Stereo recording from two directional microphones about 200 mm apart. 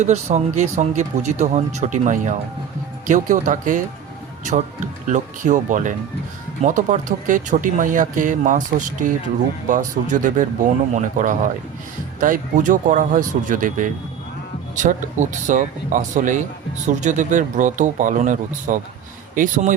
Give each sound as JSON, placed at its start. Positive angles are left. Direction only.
{"t": 0.0, "sound": "speech", "side_deg": -35}
{"t": 5.0, "sound": "speech", "side_deg": -40}